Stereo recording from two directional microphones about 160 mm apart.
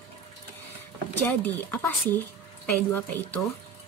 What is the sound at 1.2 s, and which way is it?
A woman's voice, 10° left (ahead or behind).